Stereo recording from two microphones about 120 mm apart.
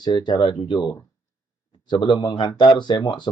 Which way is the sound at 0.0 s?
40° left (ahead or behind).